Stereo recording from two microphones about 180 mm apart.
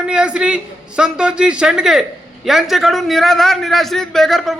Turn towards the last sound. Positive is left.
turn(degrees=0)  # may be behind; listen again after turning